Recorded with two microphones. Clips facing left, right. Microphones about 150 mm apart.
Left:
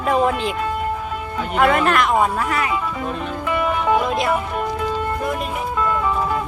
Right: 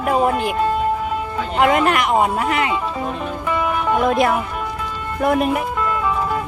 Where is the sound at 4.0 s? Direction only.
55° right (ahead or behind).